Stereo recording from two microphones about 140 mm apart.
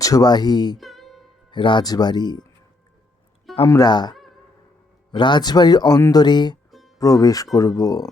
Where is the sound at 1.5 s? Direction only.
35° left (ahead or behind).